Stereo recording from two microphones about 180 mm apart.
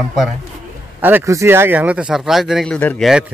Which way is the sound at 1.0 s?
10° right (ahead or behind).